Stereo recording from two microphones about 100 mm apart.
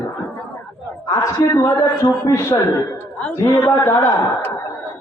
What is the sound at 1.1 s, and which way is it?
A man's voice, 30° left (ahead or behind).